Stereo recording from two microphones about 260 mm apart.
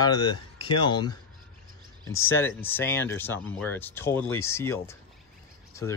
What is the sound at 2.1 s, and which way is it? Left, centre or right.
Speech, left.